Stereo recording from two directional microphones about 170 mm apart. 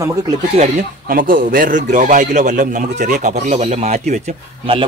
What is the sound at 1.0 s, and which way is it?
A man's voice, 55° right (ahead or behind).